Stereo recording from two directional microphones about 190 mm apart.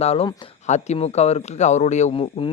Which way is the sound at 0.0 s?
35° left (ahead or behind).